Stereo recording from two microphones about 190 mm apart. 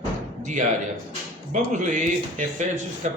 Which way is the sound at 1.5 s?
40° right (ahead or behind).